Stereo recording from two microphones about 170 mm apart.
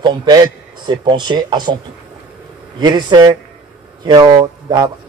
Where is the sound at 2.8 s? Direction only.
25° right (ahead or behind).